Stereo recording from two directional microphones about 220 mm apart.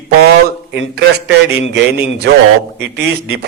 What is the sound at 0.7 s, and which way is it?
A man's voice, 50° right (ahead or behind).